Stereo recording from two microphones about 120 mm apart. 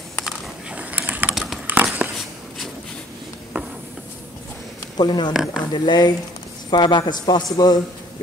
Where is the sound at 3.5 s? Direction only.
15° right (ahead or behind).